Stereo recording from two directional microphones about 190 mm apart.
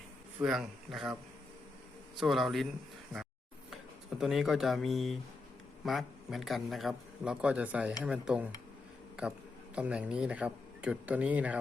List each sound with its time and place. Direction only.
0.3 s a man's voice: centre (ahead or behind)
2.1 s a man's voice: centre (ahead or behind)
4.2 s a man's voice: centre (ahead or behind)
9.7 s speech: 5° right (ahead or behind)